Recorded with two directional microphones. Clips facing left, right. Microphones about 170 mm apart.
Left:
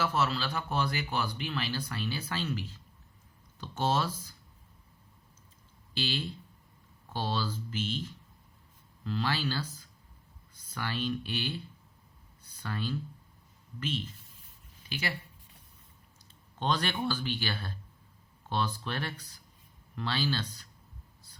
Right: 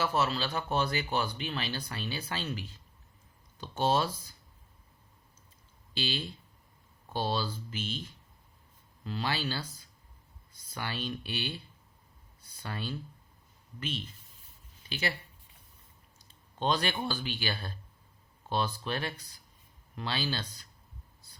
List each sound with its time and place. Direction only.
0.0 s speech: 15° right (ahead or behind)
5.9 s speech: 15° right (ahead or behind)
9.0 s speech: 15° right (ahead or behind)
10.8 s speech: 20° right (ahead or behind)
12.6 s speech: 15° right (ahead or behind)
14.8 s speech: 25° right (ahead or behind)
16.6 s speech: 15° right (ahead or behind)